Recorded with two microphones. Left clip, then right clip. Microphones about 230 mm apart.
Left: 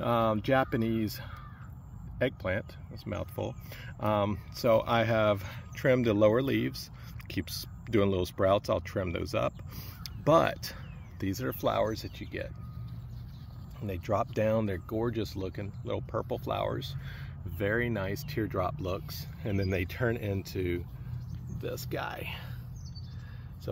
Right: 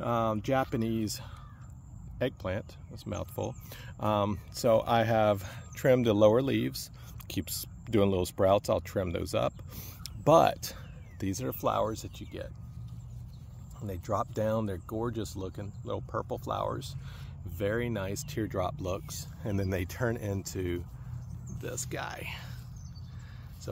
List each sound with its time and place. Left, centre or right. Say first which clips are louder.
0.0 s speech: left 2 dB; centre
13.8 s speech: left 2 dB; centre
21.9 s speech: left 2 dB; centre